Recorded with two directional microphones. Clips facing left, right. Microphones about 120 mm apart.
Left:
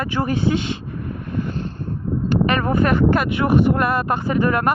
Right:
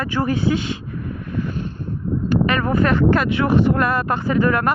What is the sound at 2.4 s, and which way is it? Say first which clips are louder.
Speech: left 1 dB; 20° left (ahead or behind).